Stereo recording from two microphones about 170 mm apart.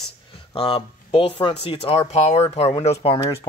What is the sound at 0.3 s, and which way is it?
Speech, 30° left (ahead or behind).